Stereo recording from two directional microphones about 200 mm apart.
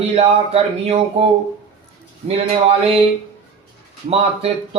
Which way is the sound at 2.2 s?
30° right (ahead or behind).